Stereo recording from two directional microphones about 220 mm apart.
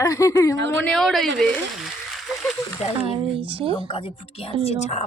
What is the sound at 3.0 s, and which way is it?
Speech, 25° right (ahead or behind).